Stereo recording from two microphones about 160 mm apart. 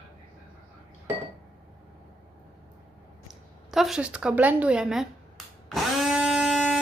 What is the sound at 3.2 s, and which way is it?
A woman's voice, centre (ahead or behind).